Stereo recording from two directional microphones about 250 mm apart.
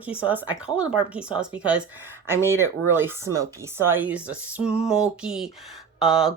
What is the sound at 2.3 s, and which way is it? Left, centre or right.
Speech, centre.